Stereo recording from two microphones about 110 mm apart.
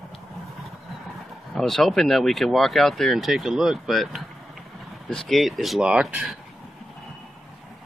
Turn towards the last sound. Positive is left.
turn(degrees=-10)  # may be behind; listen again after turning